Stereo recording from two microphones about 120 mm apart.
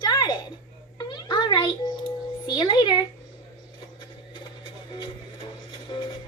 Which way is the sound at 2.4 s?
40° left (ahead or behind).